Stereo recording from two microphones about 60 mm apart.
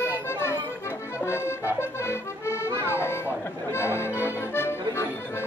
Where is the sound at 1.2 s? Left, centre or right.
Left.